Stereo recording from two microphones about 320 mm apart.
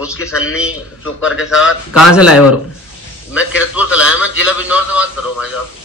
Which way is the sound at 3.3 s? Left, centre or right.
Centre.